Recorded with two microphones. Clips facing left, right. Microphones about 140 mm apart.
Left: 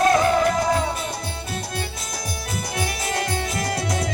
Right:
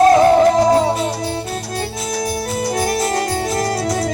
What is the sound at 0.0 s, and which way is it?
Music, 35° right (ahead or behind).